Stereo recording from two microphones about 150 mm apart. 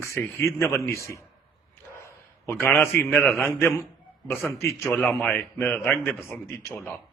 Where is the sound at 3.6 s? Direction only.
15° left (ahead or behind).